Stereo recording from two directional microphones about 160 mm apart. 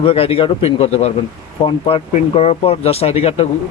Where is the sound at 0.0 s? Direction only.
35° left (ahead or behind).